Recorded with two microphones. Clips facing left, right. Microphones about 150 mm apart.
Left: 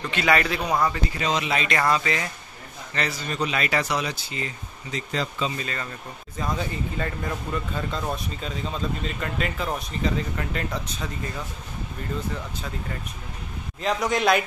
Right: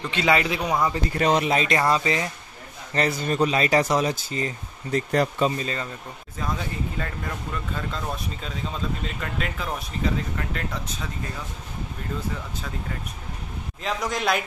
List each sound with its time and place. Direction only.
0.0 s a man's voice: 20° right (ahead or behind)
0.6 s speech: centre (ahead or behind)
1.1 s speech: 55° right (ahead or behind)
1.8 s a man's voice: 25° right (ahead or behind)
2.9 s speech: 40° right (ahead or behind)
5.1 s speech: 60° right (ahead or behind)
5.6 s a man's voice: 30° right (ahead or behind)
6.4 s speech: centre (ahead or behind)
13.8 s speech: centre (ahead or behind)